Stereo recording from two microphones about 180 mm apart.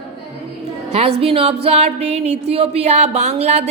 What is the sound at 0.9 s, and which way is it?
A woman's voice, 35° right (ahead or behind).